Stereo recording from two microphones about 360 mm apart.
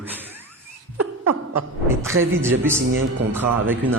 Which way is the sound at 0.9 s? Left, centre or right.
Right.